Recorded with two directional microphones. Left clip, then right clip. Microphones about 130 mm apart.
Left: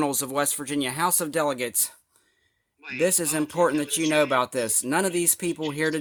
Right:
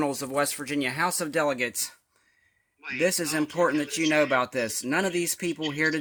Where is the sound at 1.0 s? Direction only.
20° left (ahead or behind).